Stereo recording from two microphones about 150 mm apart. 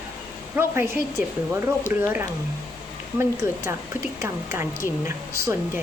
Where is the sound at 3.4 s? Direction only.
20° right (ahead or behind).